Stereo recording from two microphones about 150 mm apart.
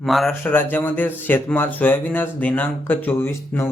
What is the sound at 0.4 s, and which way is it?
A man's voice, 15° left (ahead or behind).